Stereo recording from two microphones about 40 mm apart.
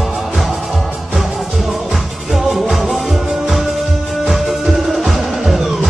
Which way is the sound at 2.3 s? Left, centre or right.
Centre.